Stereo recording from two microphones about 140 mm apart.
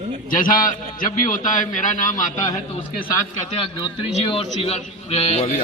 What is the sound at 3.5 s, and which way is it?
A man's voice, 40° left (ahead or behind).